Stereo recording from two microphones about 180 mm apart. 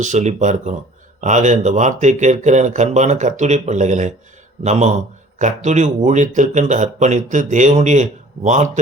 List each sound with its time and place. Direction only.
0.0 s speech: 40° right (ahead or behind)